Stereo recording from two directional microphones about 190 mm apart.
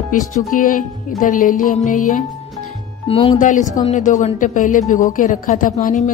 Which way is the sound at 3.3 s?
40° left (ahead or behind).